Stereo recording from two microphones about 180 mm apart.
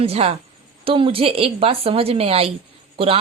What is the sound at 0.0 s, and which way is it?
A woman's voice, 35° right (ahead or behind).